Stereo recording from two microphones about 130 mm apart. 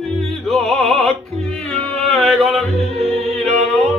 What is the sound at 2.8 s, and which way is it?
Music, 50° right (ahead or behind).